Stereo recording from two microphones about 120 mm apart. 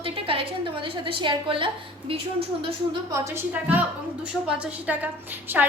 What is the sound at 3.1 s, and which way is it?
Speech, 25° right (ahead or behind).